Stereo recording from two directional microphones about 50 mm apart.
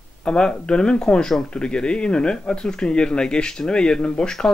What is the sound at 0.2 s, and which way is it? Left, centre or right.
Speech, centre.